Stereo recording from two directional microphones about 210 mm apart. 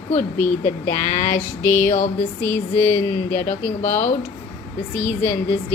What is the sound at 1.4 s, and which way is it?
Speech, 10° left (ahead or behind).